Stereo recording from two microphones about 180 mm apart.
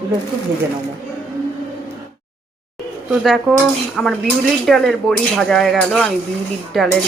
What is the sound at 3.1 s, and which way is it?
Speech, centre (ahead or behind).